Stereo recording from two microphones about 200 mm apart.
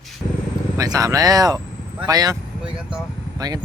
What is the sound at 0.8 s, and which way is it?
Speech, 15° right (ahead or behind).